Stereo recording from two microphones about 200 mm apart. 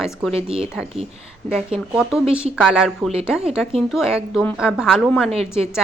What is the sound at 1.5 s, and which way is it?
Speech, 5° right (ahead or behind).